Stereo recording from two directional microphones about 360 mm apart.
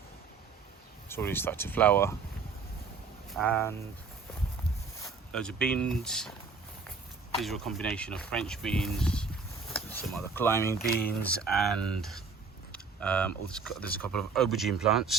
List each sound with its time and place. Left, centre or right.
1.0 s speech: centre
3.2 s speech: centre
5.0 s speech: centre
7.3 s speech: centre
10.8 s speech: left
11.2 s speech: centre